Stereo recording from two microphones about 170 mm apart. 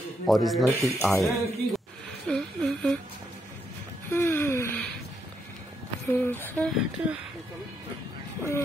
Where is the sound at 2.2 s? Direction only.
5° left (ahead or behind).